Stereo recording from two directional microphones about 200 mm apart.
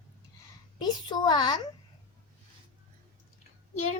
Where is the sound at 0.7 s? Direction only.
20° left (ahead or behind).